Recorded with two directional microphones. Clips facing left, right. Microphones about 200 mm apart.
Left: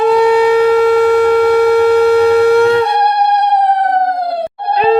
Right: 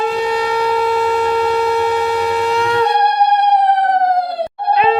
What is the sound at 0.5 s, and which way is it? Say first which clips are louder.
Shofar: left 7 dB; 55° left (ahead or behind).